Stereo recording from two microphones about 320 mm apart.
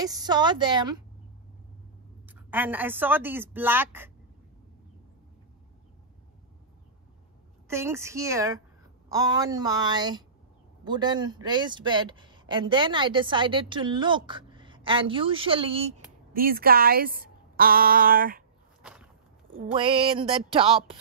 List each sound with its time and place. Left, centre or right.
0.0 s a man's voice: centre
2.2 s a man's voice: centre
7.6 s a man's voice: centre; by 18.4 s right
18.8 s a sound: centre
19.7 s a man's voice: centre